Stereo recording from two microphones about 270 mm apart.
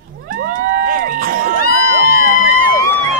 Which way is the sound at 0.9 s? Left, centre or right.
Right.